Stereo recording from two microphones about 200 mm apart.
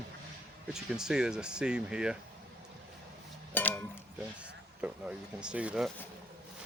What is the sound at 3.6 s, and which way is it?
Cowbell, 10° left (ahead or behind).